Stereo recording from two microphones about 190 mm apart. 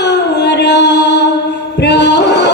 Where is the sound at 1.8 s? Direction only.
65° left (ahead or behind).